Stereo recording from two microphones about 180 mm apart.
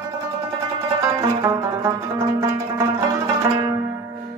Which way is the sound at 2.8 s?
20° right (ahead or behind).